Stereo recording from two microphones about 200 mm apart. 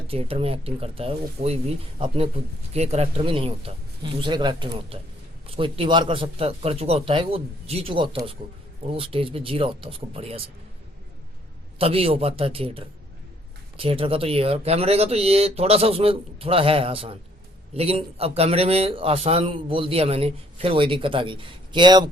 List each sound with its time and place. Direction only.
0.1 s speech: 30° right (ahead or behind)
11.8 s speech: 30° right (ahead or behind)